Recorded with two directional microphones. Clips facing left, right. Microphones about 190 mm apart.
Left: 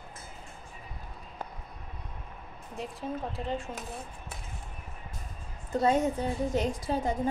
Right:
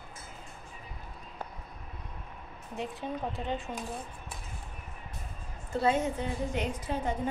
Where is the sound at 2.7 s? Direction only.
Centre (ahead or behind).